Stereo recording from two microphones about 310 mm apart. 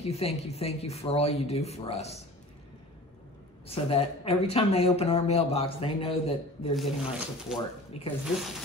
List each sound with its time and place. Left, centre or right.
0.1 s speech: centre
3.6 s speech: centre
6.7 s speech: centre
8.0 s speech: centre